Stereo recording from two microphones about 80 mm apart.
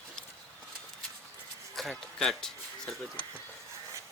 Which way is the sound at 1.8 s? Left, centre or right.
Centre.